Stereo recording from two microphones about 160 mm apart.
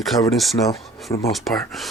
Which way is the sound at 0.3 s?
Centre (ahead or behind).